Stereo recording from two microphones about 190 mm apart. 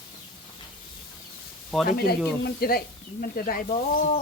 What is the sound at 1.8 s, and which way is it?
Speech, 55° left (ahead or behind).